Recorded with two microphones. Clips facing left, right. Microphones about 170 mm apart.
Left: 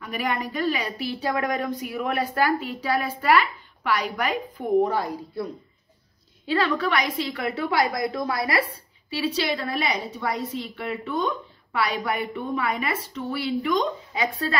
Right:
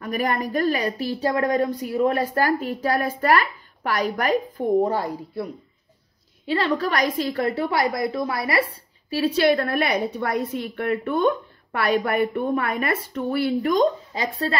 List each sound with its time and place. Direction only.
0.0 s a woman's voice: 45° right (ahead or behind)
6.5 s a woman's voice: 35° right (ahead or behind)
9.1 s a woman's voice: 50° right (ahead or behind); by 14.5 s 35° right (ahead or behind)